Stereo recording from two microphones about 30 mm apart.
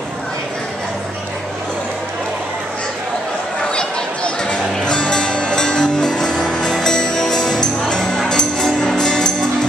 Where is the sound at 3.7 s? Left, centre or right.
Left.